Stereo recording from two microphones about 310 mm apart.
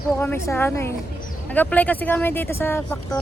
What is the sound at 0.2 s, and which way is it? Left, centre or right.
Speech, centre.